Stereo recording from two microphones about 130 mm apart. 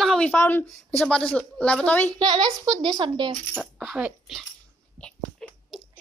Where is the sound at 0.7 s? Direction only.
5° left (ahead or behind).